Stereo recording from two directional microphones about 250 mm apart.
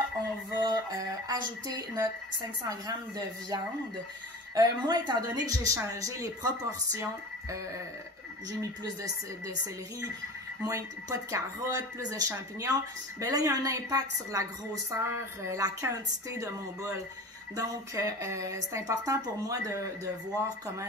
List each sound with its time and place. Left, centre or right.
0.6 s a woman's voice: centre
10.6 s a woman's voice: centre